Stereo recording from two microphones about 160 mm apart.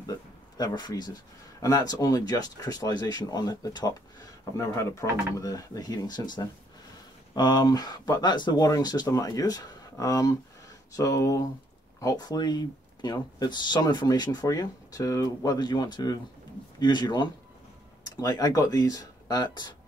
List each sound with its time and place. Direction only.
0.0 s speech: 25° left (ahead or behind)